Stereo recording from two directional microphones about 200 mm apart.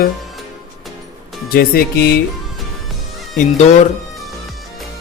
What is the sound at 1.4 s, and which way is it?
Speech, 50° left (ahead or behind).